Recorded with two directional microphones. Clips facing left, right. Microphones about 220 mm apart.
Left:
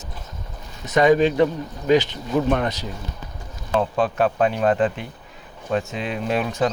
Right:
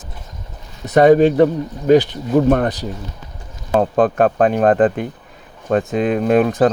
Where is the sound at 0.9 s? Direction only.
50° right (ahead or behind).